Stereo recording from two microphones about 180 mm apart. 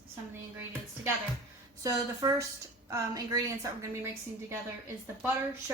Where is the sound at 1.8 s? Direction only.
20° right (ahead or behind).